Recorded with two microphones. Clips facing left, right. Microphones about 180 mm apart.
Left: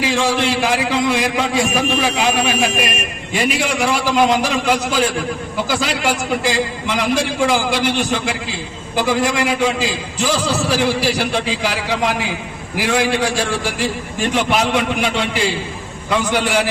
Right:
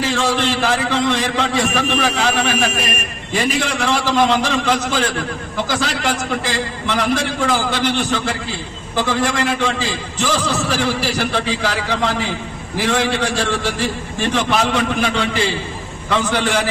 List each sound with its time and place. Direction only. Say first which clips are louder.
0.0 s a man's voice: left 1 dB; 10° left (ahead or behind)